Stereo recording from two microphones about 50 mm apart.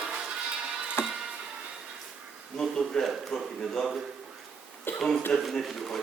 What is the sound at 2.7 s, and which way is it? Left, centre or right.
A man's voice, centre.